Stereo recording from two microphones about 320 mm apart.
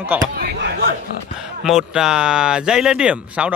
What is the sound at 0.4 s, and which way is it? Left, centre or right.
Speech, right.